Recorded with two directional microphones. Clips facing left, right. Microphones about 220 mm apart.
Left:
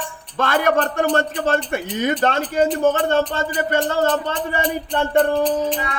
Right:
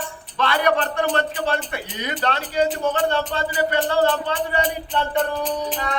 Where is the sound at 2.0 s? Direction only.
50° left (ahead or behind).